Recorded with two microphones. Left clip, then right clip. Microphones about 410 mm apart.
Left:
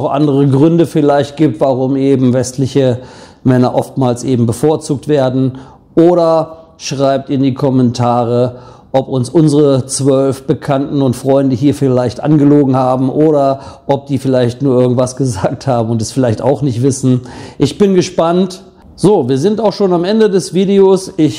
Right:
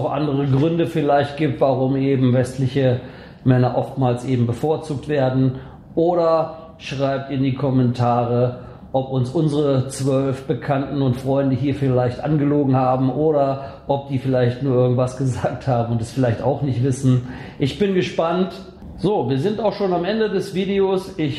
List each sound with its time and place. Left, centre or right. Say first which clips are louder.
0.1 s speech: left 10 dB; left